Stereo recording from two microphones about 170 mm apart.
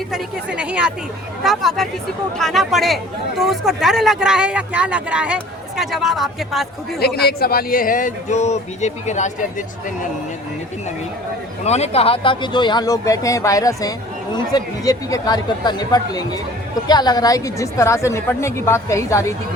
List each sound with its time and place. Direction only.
0.1 s a woman's voice: 5° right (ahead or behind)
7.0 s speech: 65° left (ahead or behind); by 10.1 s 50° left (ahead or behind)
11.6 s speech: 40° left (ahead or behind); by 19.2 s 15° left (ahead or behind)